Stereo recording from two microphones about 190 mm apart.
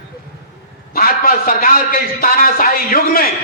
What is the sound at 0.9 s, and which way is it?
A man's voice, 50° left (ahead or behind).